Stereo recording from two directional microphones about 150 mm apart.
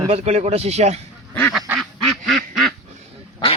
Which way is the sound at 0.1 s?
45° right (ahead or behind).